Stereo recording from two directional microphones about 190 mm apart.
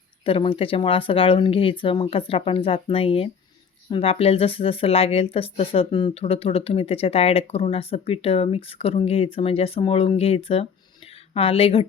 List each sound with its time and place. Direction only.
0.3 s a woman's voice: 30° left (ahead or behind)